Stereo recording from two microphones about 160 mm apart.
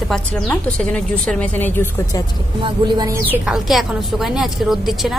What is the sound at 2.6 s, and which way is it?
Speech, 25° right (ahead or behind).